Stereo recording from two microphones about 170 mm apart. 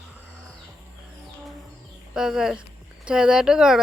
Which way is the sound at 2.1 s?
5° right (ahead or behind).